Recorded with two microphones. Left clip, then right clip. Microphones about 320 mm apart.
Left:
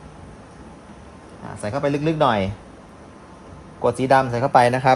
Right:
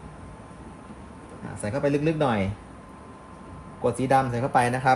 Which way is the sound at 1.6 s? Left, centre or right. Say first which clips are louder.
Left 2 dB; centre.